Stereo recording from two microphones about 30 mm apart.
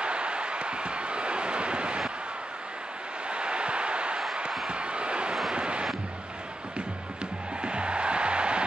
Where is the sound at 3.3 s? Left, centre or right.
Right.